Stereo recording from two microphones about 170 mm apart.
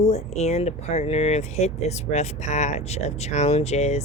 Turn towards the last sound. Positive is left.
turn(degrees=40)  # may be behind; listen again after turning